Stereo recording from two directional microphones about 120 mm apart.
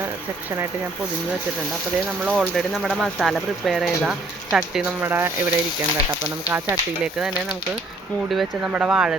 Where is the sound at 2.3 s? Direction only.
Centre (ahead or behind).